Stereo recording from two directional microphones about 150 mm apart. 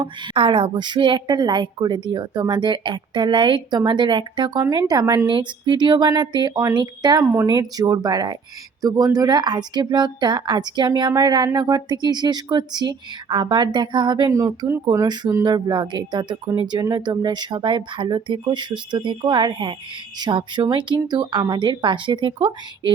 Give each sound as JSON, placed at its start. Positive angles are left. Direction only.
{"t": 0.0, "sound": "a woman's voice", "side_deg": -35}